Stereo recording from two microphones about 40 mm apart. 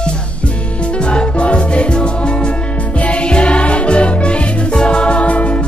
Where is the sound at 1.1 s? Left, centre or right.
Left.